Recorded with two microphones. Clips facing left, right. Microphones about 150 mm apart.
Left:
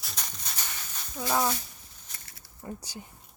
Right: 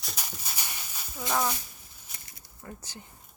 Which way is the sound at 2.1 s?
15° right (ahead or behind).